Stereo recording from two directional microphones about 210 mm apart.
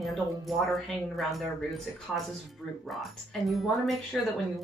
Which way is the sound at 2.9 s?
Centre (ahead or behind).